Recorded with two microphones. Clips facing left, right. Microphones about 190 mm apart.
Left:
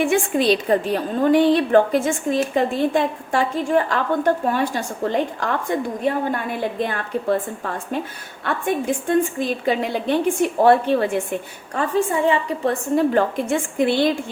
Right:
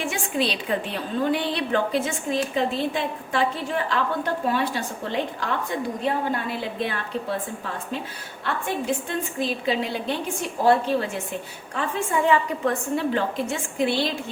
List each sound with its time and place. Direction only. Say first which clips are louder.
0.0 s a woman's voice: left 7 dB; 55° left (ahead or behind)
11.7 s a woman's voice: left 5 dB; 40° left (ahead or behind)
13.1 s a woman's voice: left 6 dB; 50° left (ahead or behind)